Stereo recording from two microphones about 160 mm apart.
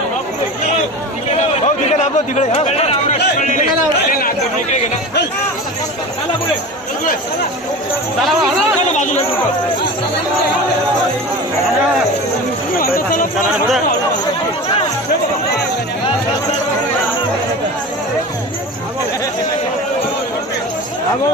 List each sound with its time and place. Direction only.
1.4 s speech: 45° left (ahead or behind)
4.2 s speech: 60° left (ahead or behind)
9.0 s speech: 50° left (ahead or behind)